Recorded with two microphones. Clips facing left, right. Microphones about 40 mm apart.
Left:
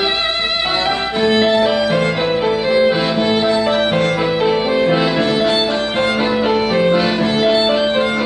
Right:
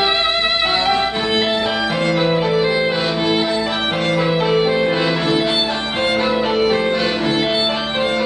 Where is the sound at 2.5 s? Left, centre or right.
Centre.